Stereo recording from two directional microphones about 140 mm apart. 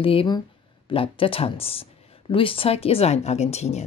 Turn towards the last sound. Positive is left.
turn(degrees=50)  # may be behind; listen again after turning